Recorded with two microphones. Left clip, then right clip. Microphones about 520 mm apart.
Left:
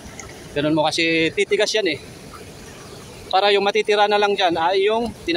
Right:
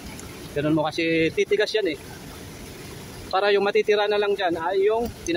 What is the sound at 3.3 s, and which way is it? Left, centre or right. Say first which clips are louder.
Speech: left 4 dB; right.